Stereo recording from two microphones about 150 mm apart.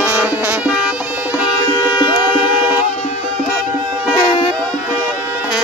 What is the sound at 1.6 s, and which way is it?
Music, 30° left (ahead or behind).